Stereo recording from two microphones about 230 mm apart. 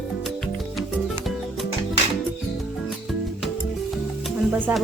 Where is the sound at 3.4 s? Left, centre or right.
Centre.